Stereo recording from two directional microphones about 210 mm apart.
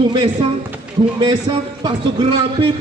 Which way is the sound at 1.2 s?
25° right (ahead or behind).